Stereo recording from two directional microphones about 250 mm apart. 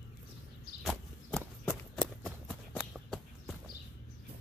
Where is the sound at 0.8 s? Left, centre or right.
Centre.